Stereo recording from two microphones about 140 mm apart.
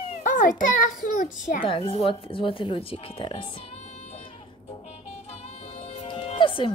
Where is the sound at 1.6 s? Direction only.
40° left (ahead or behind).